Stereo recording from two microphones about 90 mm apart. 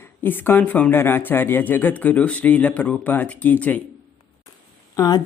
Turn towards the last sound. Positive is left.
turn(degrees=45)  # may be behind; listen again after turning